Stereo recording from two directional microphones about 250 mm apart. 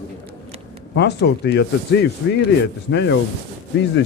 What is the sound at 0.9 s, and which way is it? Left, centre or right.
A man's voice, left.